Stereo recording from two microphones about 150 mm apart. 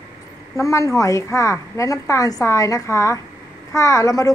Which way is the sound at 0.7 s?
20° left (ahead or behind).